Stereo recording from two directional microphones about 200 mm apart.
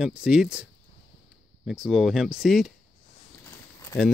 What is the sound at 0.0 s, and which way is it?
Speech, 5° right (ahead or behind).